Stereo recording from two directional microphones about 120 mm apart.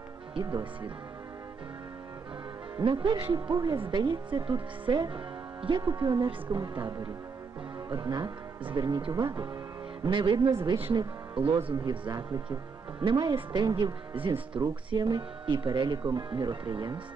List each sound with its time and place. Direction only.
0.3 s speech: 40° right (ahead or behind)
2.8 s speech: 45° right (ahead or behind)
11.7 s speech: 35° right (ahead or behind)
14.6 s speech: 35° right (ahead or behind)